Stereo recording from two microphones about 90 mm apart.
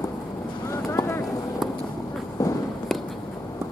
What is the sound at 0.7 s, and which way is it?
Boat, 35° left (ahead or behind).